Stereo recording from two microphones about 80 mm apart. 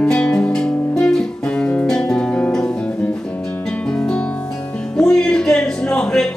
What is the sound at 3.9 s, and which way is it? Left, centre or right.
Music, centre.